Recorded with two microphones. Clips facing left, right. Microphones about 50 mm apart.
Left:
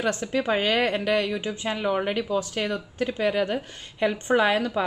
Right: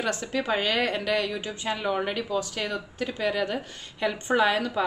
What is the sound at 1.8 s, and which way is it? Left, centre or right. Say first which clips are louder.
Speech: left 3 dB; centre.